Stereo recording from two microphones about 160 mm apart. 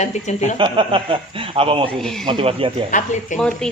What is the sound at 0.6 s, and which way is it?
A man's voice, 30° right (ahead or behind).